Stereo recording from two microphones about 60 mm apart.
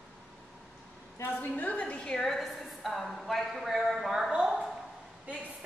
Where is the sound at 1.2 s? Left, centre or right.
Left.